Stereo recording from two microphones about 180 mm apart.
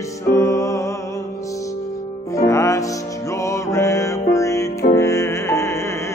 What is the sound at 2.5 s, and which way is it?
Music, 15° left (ahead or behind).